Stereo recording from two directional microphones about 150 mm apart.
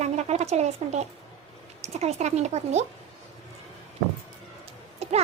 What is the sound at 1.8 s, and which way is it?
Speech, 45° right (ahead or behind).